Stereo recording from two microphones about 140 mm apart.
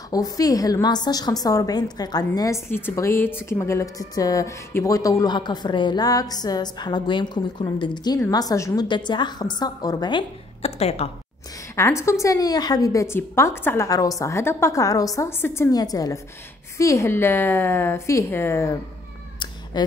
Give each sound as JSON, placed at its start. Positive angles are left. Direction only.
{"t": 0.1, "sound": "a woman's voice", "side_deg": 25}
{"t": 10.6, "sound": "a woman's voice", "side_deg": 50}
{"t": 11.7, "sound": "a woman's voice", "side_deg": 20}